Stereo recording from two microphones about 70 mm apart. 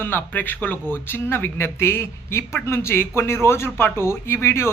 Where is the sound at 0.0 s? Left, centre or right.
Left.